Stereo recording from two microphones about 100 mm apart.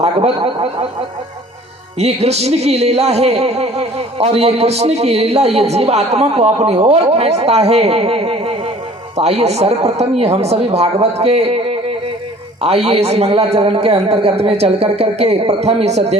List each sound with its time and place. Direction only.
0.3 s speech: 70° right (ahead or behind)
2.0 s music: 90° right